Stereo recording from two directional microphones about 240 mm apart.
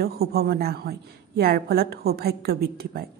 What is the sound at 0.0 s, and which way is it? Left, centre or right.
Speech, right.